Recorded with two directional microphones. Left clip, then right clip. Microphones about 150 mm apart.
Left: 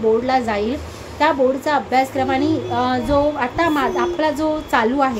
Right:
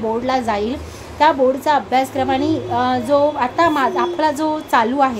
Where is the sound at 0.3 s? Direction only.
15° right (ahead or behind).